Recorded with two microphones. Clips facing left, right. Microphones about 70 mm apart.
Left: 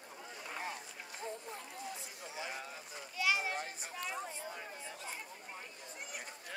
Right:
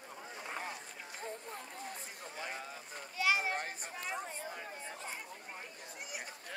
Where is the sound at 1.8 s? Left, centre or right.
Right.